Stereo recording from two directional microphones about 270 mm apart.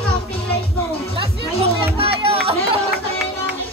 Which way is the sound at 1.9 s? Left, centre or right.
Right.